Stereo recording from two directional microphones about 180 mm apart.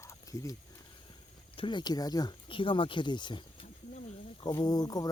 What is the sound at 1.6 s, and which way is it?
Speech, 25° left (ahead or behind).